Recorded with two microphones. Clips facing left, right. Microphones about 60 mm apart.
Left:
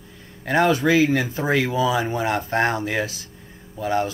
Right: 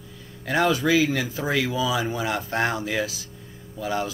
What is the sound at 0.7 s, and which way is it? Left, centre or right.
Speech, left.